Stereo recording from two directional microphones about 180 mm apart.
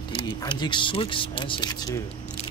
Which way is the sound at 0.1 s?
25° left (ahead or behind).